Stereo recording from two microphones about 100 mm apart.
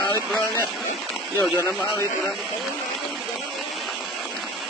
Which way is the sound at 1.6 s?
30° left (ahead or behind).